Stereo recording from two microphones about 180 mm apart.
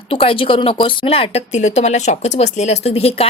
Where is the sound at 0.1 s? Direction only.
30° left (ahead or behind).